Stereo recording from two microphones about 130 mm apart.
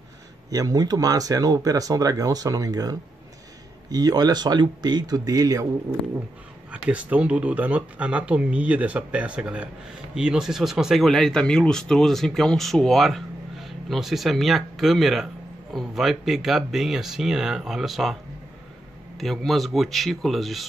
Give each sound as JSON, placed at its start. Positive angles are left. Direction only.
{"t": 0.5, "sound": "a man's voice", "side_deg": -30}
{"t": 6.9, "sound": "speech", "side_deg": -10}
{"t": 19.1, "sound": "speech", "side_deg": 0}